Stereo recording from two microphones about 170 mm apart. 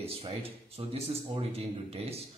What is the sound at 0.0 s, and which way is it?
Speech, 35° right (ahead or behind).